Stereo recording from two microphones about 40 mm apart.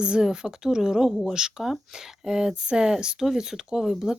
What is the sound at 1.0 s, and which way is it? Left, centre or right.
Speech, centre.